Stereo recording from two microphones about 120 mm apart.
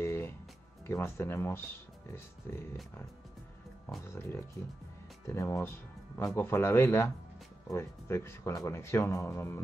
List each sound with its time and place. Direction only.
0.0 s music: 20° left (ahead or behind)
0.8 s speech: 20° left (ahead or behind)